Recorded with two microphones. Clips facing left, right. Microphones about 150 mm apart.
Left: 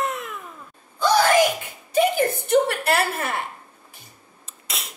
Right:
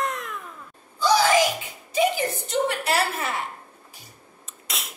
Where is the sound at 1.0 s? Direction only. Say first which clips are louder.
Left 2 dB; 55° left (ahead or behind).